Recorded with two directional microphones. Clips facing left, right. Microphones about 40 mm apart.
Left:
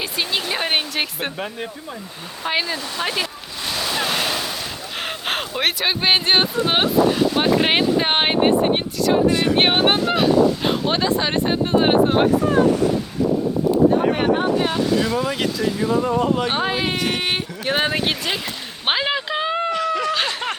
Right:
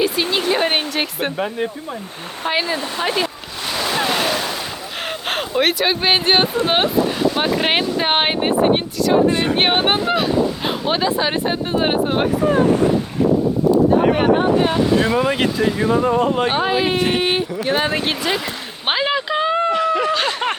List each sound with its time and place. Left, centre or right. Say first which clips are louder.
0.4 s speech: right 4 dB; centre
3.7 s waves: right 3 dB; centre
5.0 s speech: right 2 dB; centre
9.3 s speech: even; right
9.6 s speech: even; centre
14.1 s speech: right 4 dB; centre
14.8 s speech: right 4 dB; right
16.5 s speech: right 4 dB; centre
17.7 s speech: even; centre
19.7 s a sound: right 4 dB; centre